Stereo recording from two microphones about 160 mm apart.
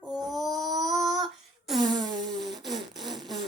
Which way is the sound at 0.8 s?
Centre (ahead or behind).